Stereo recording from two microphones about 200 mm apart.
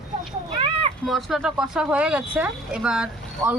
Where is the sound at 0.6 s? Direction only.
30° right (ahead or behind).